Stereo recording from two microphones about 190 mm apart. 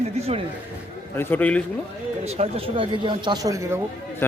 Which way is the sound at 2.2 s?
35° right (ahead or behind).